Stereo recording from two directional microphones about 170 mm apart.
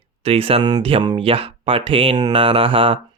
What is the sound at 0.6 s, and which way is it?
Speech, 25° right (ahead or behind).